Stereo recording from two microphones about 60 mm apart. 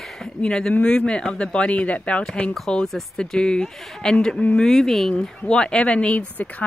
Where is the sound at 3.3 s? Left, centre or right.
Centre.